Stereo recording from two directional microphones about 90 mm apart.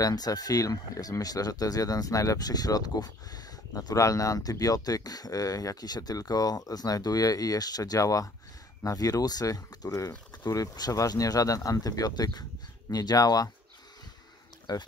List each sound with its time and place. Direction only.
0.0 s speech: 45° left (ahead or behind)
14.7 s speech: 45° left (ahead or behind)